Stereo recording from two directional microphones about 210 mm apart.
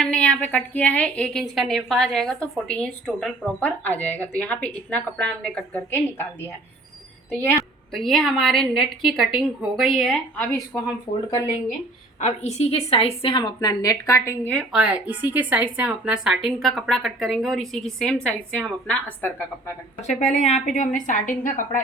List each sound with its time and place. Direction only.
0.0 s a woman's voice: 5° left (ahead or behind)
7.9 s a woman's voice: centre (ahead or behind)
12.2 s a woman's voice: 30° left (ahead or behind); by 19.7 s 10° left (ahead or behind)
20.0 s a woman's voice: 35° left (ahead or behind)